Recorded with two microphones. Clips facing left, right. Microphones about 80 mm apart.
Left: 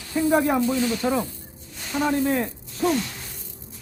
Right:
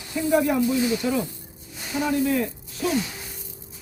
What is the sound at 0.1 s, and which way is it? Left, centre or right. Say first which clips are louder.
Speech: left 1 dB; left.